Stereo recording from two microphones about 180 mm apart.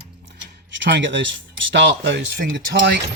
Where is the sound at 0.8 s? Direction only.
90° right.